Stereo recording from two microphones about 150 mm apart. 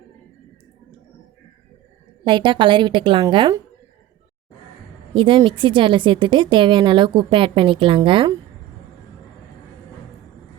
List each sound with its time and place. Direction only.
2.2 s a woman's voice: 30° right (ahead or behind)
5.1 s a woman's voice: 35° right (ahead or behind)